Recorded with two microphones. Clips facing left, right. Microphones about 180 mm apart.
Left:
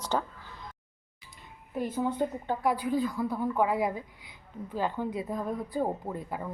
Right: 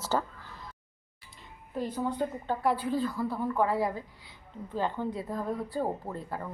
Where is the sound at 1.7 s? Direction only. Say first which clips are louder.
Left 2 dB; 20° left (ahead or behind).